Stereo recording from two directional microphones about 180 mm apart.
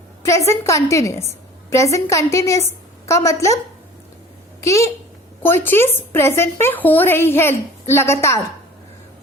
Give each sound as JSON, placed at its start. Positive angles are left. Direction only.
{"t": 0.2, "sound": "speech", "side_deg": 15}
{"t": 5.4, "sound": "speech", "side_deg": 10}